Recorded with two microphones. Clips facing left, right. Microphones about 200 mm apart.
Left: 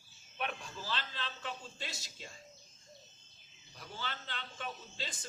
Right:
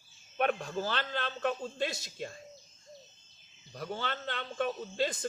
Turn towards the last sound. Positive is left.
turn(degrees=-60)  # may be behind; listen again after turning